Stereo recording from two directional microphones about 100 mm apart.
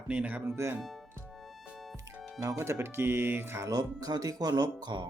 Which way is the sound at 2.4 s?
35° right (ahead or behind).